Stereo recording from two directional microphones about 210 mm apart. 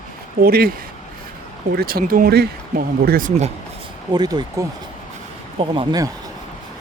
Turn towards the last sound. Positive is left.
turn(degrees=-20)  # may be behind; listen again after turning